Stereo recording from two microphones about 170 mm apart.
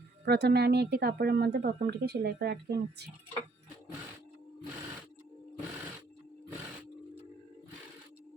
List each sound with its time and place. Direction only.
0.3 s a woman's voice: 75° right (ahead or behind)